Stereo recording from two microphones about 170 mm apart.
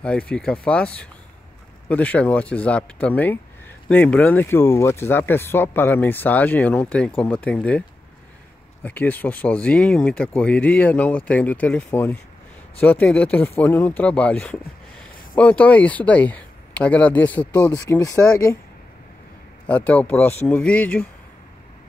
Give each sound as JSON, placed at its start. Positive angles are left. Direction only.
{"t": 0.0, "sound": "speech", "side_deg": 5}
{"t": 8.8, "sound": "speech", "side_deg": 10}
{"t": 19.6, "sound": "speech", "side_deg": 10}